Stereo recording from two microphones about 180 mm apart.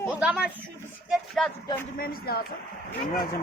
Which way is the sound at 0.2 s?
5° right (ahead or behind).